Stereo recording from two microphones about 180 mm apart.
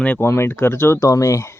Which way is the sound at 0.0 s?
10° left (ahead or behind).